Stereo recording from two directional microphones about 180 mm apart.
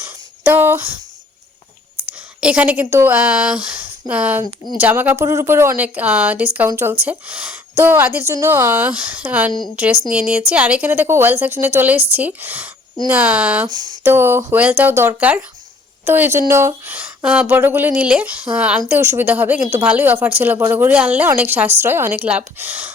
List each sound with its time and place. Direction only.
0.0 s a sound: 10° right (ahead or behind)
2.4 s a woman's voice: 5° right (ahead or behind)
4.4 s speech: 25° left (ahead or behind)
4.8 s speech: 10° right (ahead or behind)
13.7 s speech: 25° right (ahead or behind)
14.0 s speech: 15° right (ahead or behind)